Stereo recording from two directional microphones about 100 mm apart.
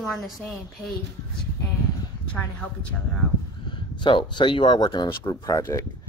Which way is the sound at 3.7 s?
55° left (ahead or behind).